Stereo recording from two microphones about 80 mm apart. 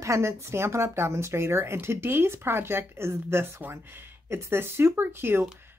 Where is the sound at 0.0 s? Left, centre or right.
Right.